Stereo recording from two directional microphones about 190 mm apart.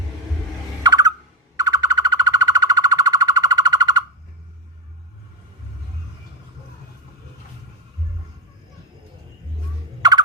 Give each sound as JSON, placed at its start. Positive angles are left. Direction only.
{"t": 0.8, "sound": "a sound", "side_deg": -20}
{"t": 1.5, "sound": "bird", "side_deg": -20}
{"t": 10.0, "sound": "turkey", "side_deg": -20}